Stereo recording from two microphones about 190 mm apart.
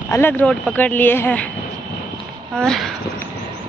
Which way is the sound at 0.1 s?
10° left (ahead or behind).